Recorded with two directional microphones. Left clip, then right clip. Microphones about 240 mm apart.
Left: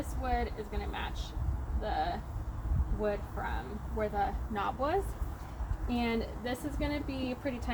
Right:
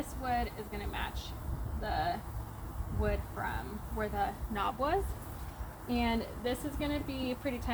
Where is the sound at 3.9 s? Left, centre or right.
Centre.